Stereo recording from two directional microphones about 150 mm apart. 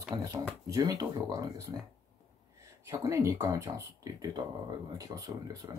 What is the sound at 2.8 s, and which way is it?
Speech, 20° right (ahead or behind).